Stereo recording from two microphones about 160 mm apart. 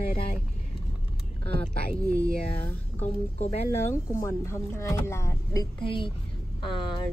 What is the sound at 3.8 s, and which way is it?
A woman's voice, 15° left (ahead or behind).